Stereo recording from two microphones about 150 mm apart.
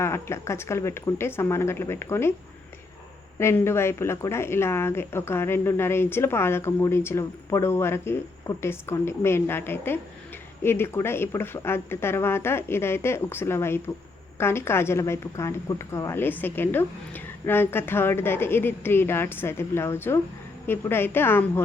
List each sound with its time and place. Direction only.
0.0 s speech: 15° left (ahead or behind)
3.3 s speech: 15° left (ahead or behind)